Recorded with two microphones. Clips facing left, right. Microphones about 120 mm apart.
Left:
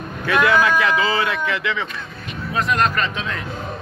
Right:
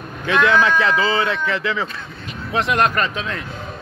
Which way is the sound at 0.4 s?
10° left (ahead or behind).